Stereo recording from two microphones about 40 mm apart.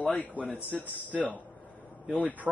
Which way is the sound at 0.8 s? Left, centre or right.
Right.